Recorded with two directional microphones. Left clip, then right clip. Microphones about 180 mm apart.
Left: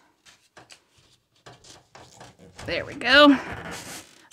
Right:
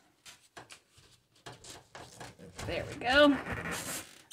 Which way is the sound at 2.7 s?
45° left (ahead or behind).